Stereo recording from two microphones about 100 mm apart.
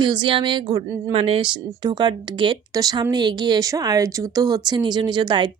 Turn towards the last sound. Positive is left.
turn(degrees=-50)  # may be behind; listen again after turning